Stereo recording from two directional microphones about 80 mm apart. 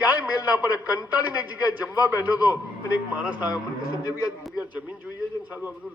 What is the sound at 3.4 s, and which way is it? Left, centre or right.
A man's voice, left.